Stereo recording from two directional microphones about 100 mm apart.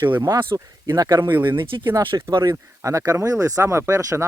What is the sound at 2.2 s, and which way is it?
Speech, 50° right (ahead or behind).